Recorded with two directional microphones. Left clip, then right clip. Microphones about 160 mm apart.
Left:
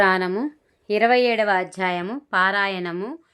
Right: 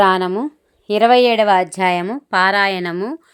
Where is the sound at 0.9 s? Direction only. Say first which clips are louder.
Right 6 dB; 30° right (ahead or behind).